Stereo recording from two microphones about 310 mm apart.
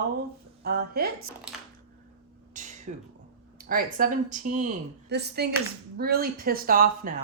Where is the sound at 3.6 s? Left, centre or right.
Right.